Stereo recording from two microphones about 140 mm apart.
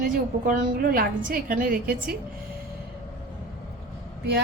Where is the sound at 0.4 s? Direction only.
90° right.